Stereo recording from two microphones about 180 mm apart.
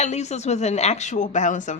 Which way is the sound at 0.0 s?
40° left (ahead or behind).